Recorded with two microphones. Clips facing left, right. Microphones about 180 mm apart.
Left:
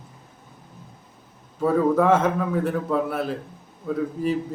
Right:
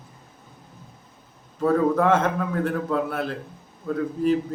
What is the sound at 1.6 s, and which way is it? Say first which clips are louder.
Speech: left 1 dB; 5° left (ahead or behind).